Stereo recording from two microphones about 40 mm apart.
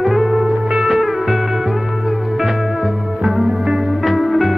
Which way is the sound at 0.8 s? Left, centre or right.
Centre.